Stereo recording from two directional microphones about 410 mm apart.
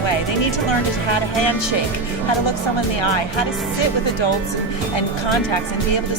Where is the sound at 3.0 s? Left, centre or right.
Left.